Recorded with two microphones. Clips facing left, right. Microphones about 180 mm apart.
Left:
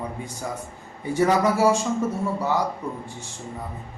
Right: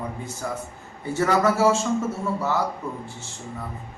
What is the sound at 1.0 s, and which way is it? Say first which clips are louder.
Speech: left 1 dB; 15° left (ahead or behind).